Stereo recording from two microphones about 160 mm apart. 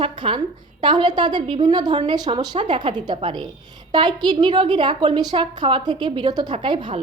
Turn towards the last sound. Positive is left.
turn(degrees=-30)  # may be behind; listen again after turning